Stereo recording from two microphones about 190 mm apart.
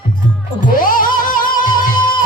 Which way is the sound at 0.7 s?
45° left (ahead or behind).